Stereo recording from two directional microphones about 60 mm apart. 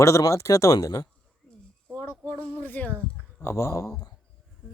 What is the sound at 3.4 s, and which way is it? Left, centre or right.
Speech, left.